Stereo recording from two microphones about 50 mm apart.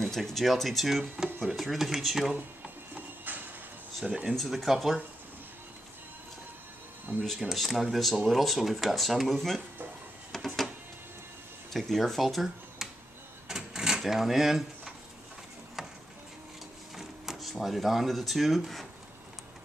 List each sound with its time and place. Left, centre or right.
0.0 s speech: centre
2.6 s a sound: right
4.0 s speech: right
4.4 s speech: centre
7.1 s speech: right
7.5 s speech: centre
10.3 s printer: centre
11.7 s speech: centre
13.5 s a sound: centre
16.9 s speech: centre